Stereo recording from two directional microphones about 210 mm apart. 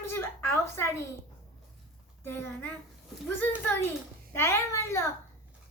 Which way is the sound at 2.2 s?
10° left (ahead or behind).